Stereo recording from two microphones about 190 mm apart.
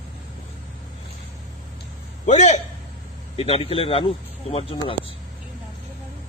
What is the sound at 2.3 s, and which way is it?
Speech, 35° left (ahead or behind).